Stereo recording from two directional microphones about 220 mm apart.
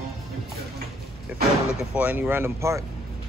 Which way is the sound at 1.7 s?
5° right (ahead or behind).